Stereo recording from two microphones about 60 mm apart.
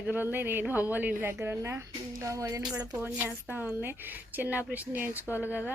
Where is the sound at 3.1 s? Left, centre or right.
Right.